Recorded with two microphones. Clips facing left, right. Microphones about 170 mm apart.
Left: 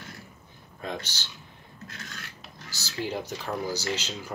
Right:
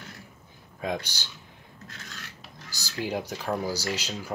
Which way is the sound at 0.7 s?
10° right (ahead or behind).